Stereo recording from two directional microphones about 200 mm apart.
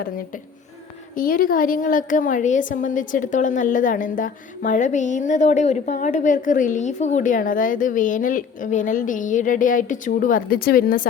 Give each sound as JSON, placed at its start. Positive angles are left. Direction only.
{"t": 1.1, "sound": "a woman's voice", "side_deg": 45}